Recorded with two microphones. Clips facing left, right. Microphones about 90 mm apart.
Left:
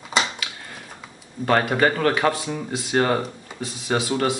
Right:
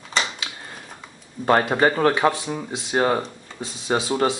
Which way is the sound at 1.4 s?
25° right (ahead or behind).